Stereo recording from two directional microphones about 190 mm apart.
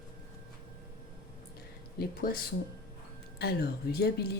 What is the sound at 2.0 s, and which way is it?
Speech, 50° left (ahead or behind).